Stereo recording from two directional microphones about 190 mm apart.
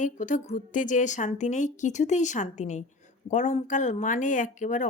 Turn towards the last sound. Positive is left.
turn(degrees=40)  # may be behind; listen again after turning